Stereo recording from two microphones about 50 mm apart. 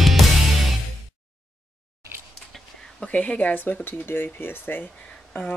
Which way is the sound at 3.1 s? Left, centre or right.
Left.